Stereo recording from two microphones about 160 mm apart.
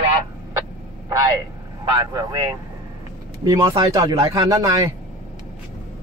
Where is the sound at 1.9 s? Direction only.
25° right (ahead or behind).